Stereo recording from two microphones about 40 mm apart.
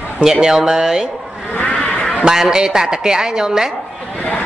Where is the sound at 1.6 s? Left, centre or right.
Left.